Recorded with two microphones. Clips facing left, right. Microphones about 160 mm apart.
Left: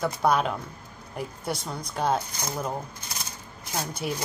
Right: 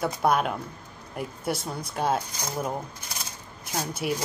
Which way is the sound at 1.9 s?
5° right (ahead or behind).